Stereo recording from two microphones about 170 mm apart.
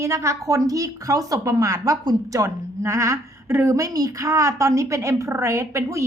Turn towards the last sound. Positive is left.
turn(degrees=-15)  # may be behind; listen again after turning